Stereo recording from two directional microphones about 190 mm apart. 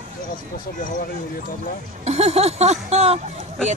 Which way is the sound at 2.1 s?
35° right (ahead or behind).